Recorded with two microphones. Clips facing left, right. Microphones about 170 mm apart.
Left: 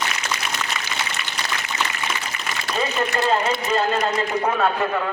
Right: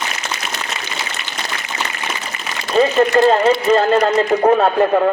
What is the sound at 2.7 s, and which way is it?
Speech, 40° right (ahead or behind).